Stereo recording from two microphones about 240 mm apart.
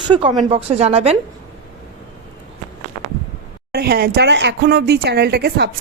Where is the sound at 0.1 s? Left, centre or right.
Right.